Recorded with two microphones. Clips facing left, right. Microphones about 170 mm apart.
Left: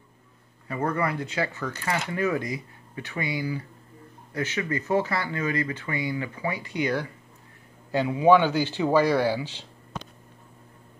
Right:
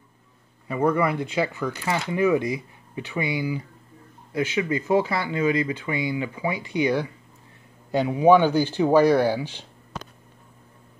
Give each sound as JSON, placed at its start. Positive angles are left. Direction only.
{"t": 0.7, "sound": "speech", "side_deg": -15}